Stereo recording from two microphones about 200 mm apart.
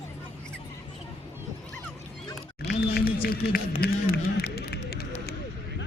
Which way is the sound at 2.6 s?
55° left (ahead or behind).